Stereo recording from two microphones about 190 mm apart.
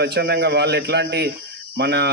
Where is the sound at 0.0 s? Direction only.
60° right (ahead or behind).